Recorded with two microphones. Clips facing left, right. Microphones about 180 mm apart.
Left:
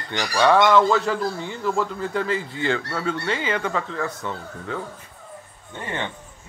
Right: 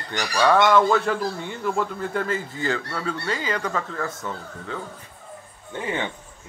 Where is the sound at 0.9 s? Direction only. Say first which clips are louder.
Even; 55° right (ahead or behind).